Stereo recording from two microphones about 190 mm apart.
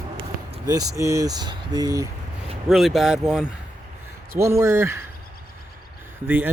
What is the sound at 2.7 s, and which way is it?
Speech, centre (ahead or behind).